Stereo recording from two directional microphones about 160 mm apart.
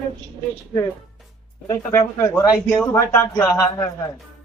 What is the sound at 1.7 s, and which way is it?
Speech, 20° left (ahead or behind).